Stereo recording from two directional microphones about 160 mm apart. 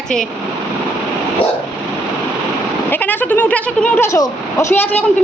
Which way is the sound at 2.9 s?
10° left (ahead or behind).